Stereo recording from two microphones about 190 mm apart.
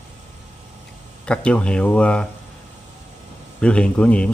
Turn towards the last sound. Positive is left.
turn(degrees=5)  # may be behind; listen again after turning